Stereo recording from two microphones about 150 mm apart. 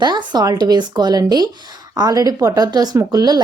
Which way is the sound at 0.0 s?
30° right (ahead or behind).